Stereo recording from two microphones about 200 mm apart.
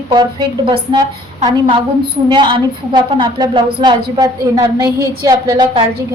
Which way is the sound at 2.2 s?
25° right (ahead or behind).